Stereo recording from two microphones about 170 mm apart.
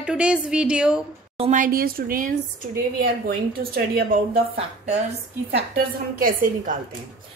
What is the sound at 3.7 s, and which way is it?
Speech, 60° right (ahead or behind).